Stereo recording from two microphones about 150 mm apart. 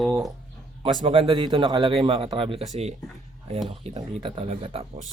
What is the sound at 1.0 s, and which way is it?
Speech, 35° right (ahead or behind).